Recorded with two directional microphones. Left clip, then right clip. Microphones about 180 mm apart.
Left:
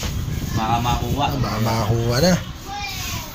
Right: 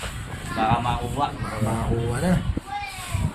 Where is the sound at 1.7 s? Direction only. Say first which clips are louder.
Left 5 dB; 40° left (ahead or behind).